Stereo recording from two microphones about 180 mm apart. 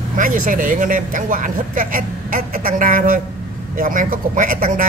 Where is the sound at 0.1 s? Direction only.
50° right (ahead or behind).